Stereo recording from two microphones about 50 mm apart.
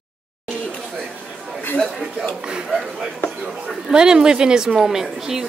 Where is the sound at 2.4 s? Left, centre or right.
Centre.